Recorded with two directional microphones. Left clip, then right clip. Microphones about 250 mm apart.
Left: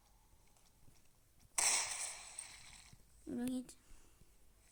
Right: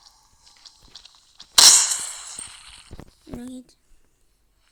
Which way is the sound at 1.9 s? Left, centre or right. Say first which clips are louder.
Right 14 dB; right.